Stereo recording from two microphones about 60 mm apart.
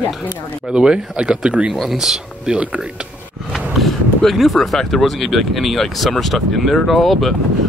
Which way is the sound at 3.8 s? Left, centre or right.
Centre.